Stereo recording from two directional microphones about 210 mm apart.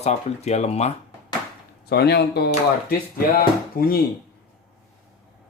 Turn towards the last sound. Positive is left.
turn(degrees=45)  # may be behind; listen again after turning